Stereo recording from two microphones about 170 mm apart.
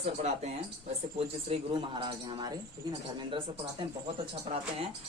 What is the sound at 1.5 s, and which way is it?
Speech, 30° right (ahead or behind).